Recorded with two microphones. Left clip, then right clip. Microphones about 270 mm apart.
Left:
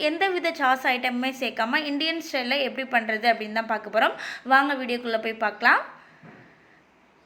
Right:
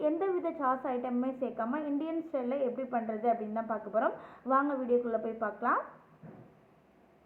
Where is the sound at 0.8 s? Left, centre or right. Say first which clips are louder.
Left 9 dB; centre.